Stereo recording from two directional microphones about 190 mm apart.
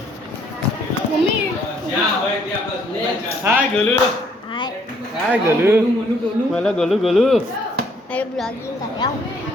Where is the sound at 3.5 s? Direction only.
15° right (ahead or behind).